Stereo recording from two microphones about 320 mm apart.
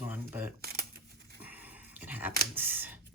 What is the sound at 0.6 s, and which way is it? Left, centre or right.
Camera, right.